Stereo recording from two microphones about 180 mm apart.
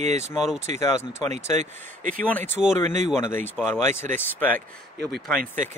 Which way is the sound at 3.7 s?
15° left (ahead or behind).